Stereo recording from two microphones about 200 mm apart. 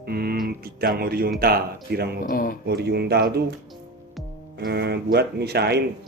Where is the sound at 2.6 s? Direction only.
55° right (ahead or behind).